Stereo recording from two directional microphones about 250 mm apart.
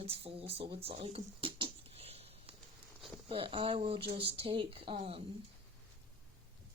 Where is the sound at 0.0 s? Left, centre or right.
Right.